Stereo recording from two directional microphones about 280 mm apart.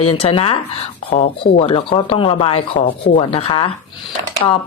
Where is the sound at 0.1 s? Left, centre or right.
Centre.